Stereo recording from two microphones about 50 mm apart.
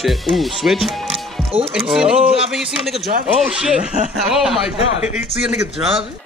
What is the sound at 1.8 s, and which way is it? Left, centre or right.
Speech, centre.